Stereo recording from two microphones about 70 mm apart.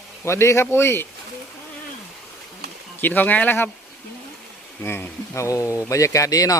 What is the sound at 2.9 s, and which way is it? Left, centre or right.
Speech, left.